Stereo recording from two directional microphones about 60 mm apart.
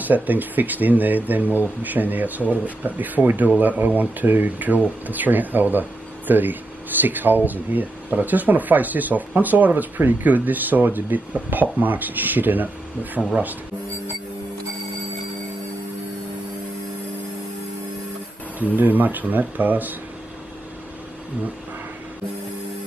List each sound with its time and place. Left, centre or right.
0.0 s speech: right
13.2 s speech: centre
18.8 s speech: right